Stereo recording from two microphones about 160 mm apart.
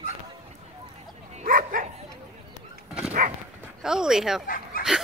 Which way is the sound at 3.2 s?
55° right (ahead or behind).